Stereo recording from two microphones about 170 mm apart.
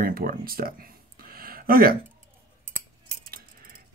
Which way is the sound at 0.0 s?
60° right (ahead or behind).